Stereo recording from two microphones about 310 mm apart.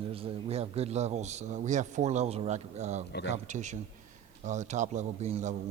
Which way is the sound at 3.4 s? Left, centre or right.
Right.